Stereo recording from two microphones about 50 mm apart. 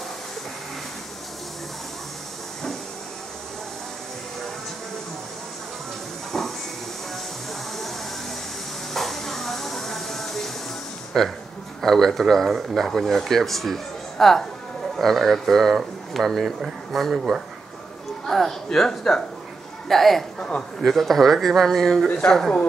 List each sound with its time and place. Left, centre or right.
6.3 s hiss: centre
8.9 s music: centre
11.1 s speech: centre
20.3 s a man's voice: centre
20.8 s speech: centre